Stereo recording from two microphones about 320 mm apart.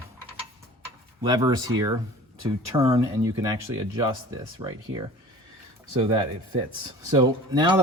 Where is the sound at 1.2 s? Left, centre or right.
Centre.